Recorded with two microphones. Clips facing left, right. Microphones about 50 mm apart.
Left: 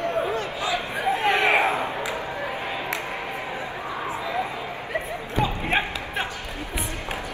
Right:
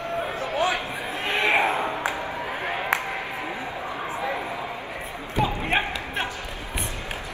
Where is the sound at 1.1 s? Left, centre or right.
Left.